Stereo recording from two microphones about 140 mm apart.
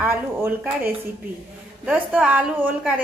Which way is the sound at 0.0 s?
15° right (ahead or behind).